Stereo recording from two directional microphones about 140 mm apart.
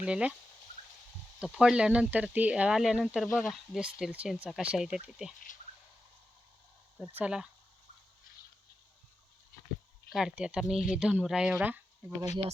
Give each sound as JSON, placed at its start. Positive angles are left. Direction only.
{"t": 0.0, "sound": "speech", "side_deg": -10}
{"t": 1.4, "sound": "speech", "side_deg": -5}
{"t": 7.0, "sound": "speech", "side_deg": -15}
{"t": 10.1, "sound": "speech", "side_deg": -5}